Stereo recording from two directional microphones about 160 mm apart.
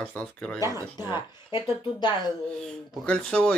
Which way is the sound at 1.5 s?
25° left (ahead or behind).